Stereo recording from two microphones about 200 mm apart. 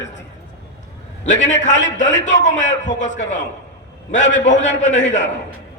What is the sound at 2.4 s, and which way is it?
Speech, 40° left (ahead or behind).